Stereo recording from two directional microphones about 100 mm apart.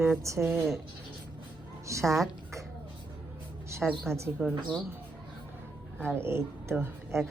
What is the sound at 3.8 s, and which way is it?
Speech, 5° right (ahead or behind).